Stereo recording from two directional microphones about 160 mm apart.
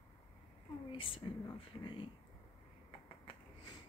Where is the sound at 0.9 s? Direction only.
35° left (ahead or behind).